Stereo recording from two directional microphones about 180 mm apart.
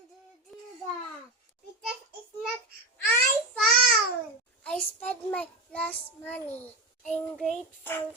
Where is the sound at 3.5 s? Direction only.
5° left (ahead or behind).